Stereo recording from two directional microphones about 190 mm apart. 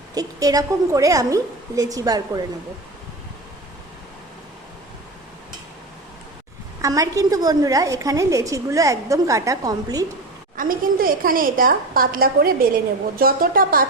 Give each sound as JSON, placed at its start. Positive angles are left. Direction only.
{"t": 0.1, "sound": "a woman's voice", "side_deg": -20}
{"t": 6.8, "sound": "a woman's voice", "side_deg": -20}
{"t": 10.6, "sound": "a woman's voice", "side_deg": -50}